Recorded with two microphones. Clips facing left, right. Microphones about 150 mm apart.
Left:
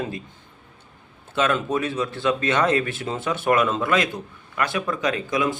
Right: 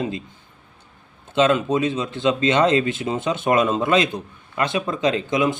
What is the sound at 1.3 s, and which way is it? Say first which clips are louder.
Speech: right 4 dB; 20° right (ahead or behind).